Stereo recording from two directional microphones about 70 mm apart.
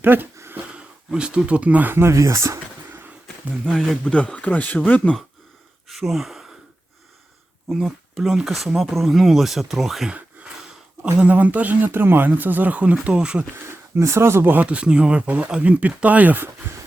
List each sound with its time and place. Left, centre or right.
0.0 s speech: right
1.1 s speech: centre; by 2.6 s right
3.6 s speech: centre
5.9 s speech: centre
7.7 s speech: centre
10.1 s a sound: centre
11.0 s speech: centre
13.7 s speech: right